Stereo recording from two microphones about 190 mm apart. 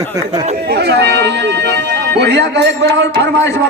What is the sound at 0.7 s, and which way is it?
Speech, 60° right (ahead or behind).